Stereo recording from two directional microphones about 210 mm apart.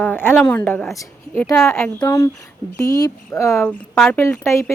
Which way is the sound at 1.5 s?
5° left (ahead or behind).